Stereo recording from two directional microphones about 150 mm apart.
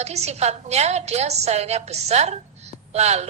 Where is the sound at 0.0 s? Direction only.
45° right (ahead or behind).